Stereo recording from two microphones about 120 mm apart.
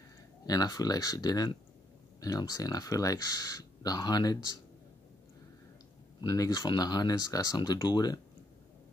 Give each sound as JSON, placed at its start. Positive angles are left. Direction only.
{"t": 0.5, "sound": "speech", "side_deg": 30}
{"t": 6.2, "sound": "speech", "side_deg": 30}